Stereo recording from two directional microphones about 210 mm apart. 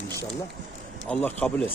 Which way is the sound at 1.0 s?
5° left (ahead or behind).